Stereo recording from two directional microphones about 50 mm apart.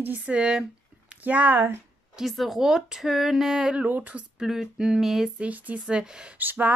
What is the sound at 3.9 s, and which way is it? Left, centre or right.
Speech, right.